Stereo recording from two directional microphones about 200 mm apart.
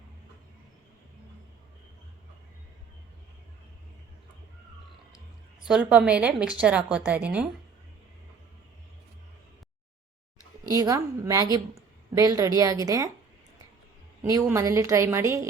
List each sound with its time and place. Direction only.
5.6 s a woman's voice: 5° right (ahead or behind)
10.7 s a woman's voice: 15° right (ahead or behind)
14.5 s a woman's voice: 15° right (ahead or behind)